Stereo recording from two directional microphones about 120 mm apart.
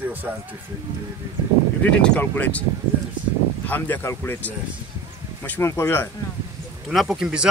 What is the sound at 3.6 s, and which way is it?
Speech, 15° left (ahead or behind).